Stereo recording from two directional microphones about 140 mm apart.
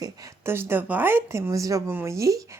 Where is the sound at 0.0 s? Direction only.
25° right (ahead or behind).